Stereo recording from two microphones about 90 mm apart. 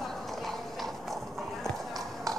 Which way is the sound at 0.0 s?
5° left (ahead or behind).